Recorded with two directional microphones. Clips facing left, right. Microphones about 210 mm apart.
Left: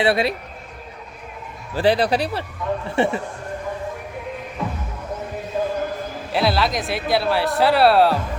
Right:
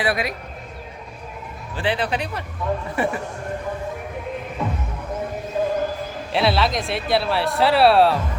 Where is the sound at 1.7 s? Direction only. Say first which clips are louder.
Left 6 dB; 40° left (ahead or behind).